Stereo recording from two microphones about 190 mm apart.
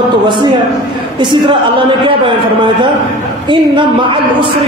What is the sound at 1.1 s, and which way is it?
A man's voice, 25° right (ahead or behind).